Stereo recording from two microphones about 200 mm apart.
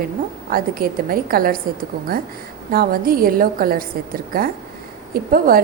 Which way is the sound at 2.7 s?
45° right (ahead or behind).